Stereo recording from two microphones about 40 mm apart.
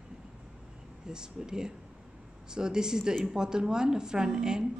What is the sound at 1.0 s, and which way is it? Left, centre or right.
Speech, centre.